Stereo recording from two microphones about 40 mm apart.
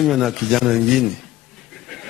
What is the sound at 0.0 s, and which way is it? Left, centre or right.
Speech, centre.